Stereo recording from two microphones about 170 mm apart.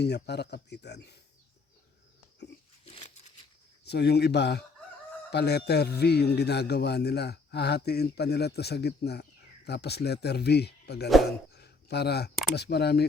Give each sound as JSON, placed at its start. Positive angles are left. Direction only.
{"t": 0.0, "sound": "speech", "side_deg": 75}
{"t": 2.8, "sound": "a sound", "side_deg": 35}
{"t": 3.8, "sound": "a man's voice", "side_deg": 75}